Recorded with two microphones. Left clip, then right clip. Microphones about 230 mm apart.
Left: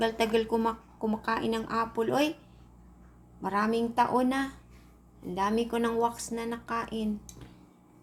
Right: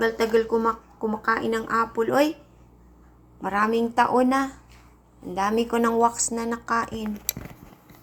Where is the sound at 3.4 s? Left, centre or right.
Centre.